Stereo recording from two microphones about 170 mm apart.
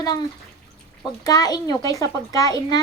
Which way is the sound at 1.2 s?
20° left (ahead or behind).